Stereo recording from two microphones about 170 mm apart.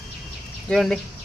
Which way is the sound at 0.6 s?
Centre (ahead or behind).